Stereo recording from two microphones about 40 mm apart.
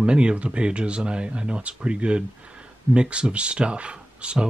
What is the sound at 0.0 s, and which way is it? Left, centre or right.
A man's voice, right.